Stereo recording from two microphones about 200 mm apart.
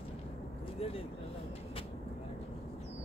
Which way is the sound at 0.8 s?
30° left (ahead or behind).